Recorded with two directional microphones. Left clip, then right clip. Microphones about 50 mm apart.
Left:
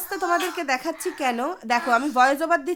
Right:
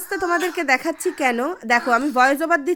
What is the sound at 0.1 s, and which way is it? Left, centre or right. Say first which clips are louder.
Speech: right 3 dB; right.